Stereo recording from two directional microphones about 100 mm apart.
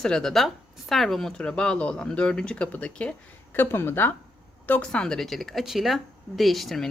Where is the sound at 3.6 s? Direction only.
20° left (ahead or behind).